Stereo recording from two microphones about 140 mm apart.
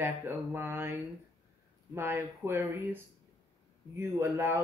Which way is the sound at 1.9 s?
15° right (ahead or behind).